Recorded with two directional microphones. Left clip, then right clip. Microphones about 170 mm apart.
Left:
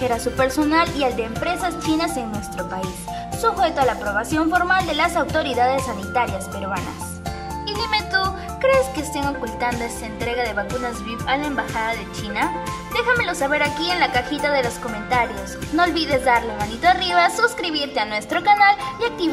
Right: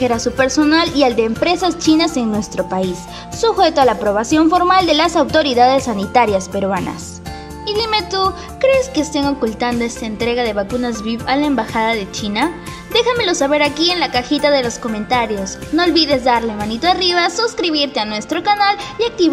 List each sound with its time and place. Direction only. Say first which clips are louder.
0.0 s a woman's voice: right 5 dB; 15° right (ahead or behind)
7.6 s music: right 6 dB; 15° right (ahead or behind)
10.2 s a woman's voice: right 6 dB; 20° right (ahead or behind)